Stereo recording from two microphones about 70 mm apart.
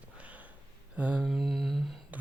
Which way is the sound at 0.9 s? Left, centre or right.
Right.